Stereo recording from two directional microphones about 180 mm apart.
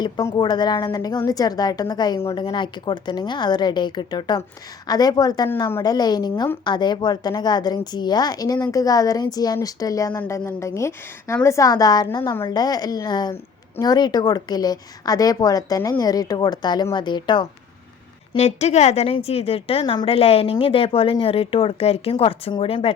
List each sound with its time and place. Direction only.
0.0 s a woman's voice: 20° left (ahead or behind)
18.3 s a woman's voice: 35° left (ahead or behind)